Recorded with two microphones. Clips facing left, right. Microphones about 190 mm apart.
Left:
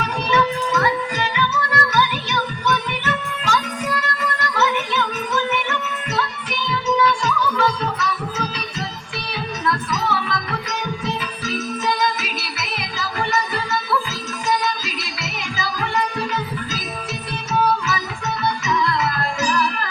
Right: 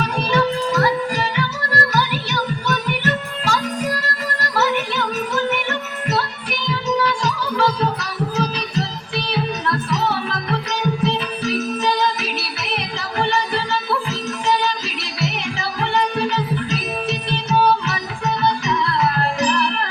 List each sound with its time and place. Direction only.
0.2 s music: 35° right (ahead or behind)
17.6 s music: 30° right (ahead or behind)